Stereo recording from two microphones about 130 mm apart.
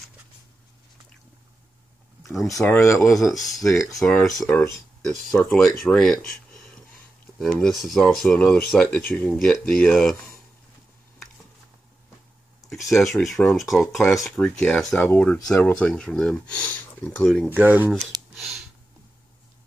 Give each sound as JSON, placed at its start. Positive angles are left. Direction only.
{"t": 2.6, "sound": "speech", "side_deg": 20}
{"t": 3.1, "sound": "speech", "side_deg": 0}
{"t": 12.6, "sound": "speech", "side_deg": 0}
{"t": 17.2, "sound": "speech", "side_deg": 5}
{"t": 17.5, "sound": "speech", "side_deg": -15}
{"t": 18.3, "sound": "a sound", "side_deg": -5}